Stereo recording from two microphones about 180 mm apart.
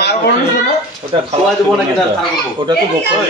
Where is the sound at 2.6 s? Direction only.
30° right (ahead or behind).